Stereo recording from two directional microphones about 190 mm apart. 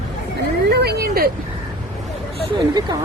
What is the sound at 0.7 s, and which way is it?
Speech, 55° right (ahead or behind).